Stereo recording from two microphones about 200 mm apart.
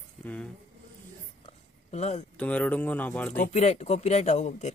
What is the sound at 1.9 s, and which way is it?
Speech, 35° left (ahead or behind).